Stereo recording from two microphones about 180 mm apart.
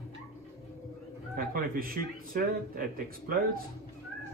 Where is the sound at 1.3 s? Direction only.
55° right (ahead or behind).